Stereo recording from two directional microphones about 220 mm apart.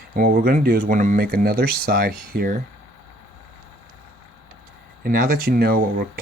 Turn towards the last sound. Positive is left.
turn(degrees=-45)  # may be behind; listen again after turning